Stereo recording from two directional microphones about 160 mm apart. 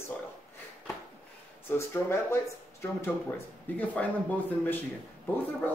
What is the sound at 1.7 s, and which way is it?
Speech, 15° left (ahead or behind).